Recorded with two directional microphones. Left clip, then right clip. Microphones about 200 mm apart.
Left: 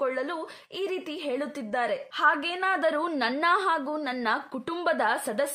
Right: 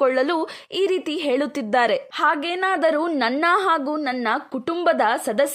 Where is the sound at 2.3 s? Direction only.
35° right (ahead or behind).